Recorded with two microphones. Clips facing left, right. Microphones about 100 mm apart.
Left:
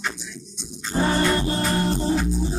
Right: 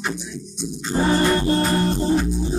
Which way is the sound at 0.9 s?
25° right (ahead or behind).